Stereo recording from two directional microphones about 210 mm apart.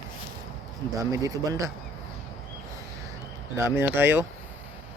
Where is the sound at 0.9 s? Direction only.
15° right (ahead or behind).